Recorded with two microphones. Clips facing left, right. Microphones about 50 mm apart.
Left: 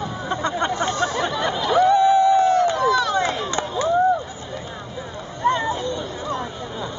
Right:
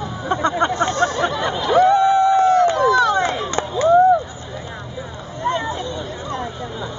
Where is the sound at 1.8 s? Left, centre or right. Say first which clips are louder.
Even; right.